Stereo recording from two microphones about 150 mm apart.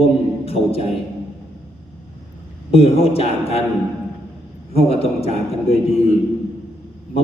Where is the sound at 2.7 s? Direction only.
40° left (ahead or behind).